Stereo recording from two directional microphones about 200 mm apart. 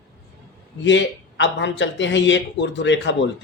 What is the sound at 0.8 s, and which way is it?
Speech, 65° left (ahead or behind).